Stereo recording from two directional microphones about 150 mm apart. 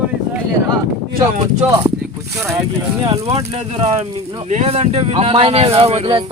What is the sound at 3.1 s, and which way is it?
Speech, 40° right (ahead or behind).